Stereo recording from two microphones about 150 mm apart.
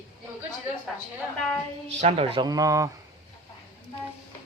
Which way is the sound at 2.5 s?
20° right (ahead or behind).